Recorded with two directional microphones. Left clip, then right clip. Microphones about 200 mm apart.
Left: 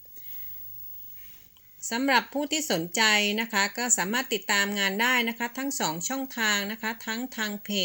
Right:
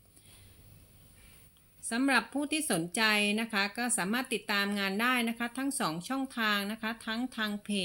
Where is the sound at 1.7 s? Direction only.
15° left (ahead or behind).